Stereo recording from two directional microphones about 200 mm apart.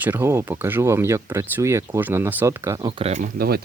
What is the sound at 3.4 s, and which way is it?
Speech, 50° right (ahead or behind).